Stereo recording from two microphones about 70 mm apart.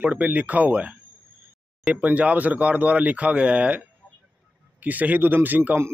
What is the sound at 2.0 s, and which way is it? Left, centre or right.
Speech, right.